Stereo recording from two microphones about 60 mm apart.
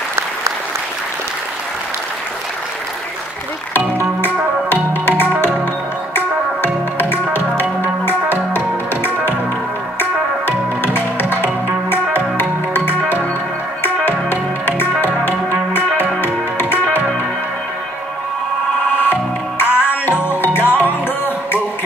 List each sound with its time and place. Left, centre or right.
4.2 s music: left
18.9 s music: left